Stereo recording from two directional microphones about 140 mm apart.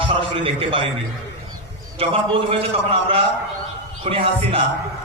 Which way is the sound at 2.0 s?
40° right (ahead or behind).